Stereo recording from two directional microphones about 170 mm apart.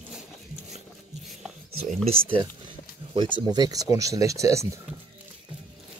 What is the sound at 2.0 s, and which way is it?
Speech, 30° right (ahead or behind).